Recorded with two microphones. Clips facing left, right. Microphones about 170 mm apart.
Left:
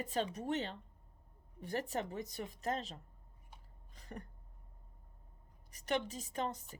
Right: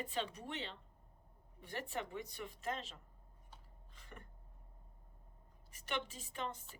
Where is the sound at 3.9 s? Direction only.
40° left (ahead or behind).